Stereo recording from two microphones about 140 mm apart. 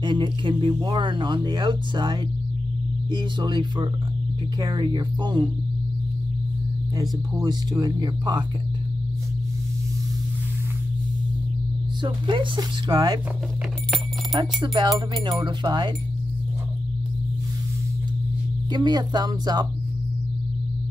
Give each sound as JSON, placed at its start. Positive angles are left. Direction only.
{"t": 0.0, "sound": "speech", "side_deg": -35}
{"t": 7.0, "sound": "speech", "side_deg": -30}
{"t": 12.0, "sound": "speech", "side_deg": -35}
{"t": 14.3, "sound": "speech", "side_deg": -30}
{"t": 18.7, "sound": "speech", "side_deg": -30}